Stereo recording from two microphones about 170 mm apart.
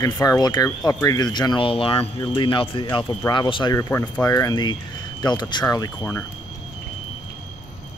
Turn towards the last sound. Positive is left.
turn(degrees=20)  # may be behind; listen again after turning